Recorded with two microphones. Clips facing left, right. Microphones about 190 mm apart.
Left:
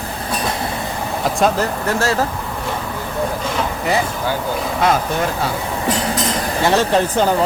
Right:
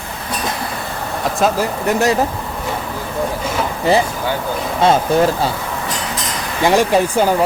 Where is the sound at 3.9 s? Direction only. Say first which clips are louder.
Right 5 dB; 30° right (ahead or behind).